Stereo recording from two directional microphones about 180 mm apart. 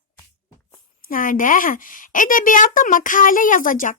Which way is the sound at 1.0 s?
50° left (ahead or behind).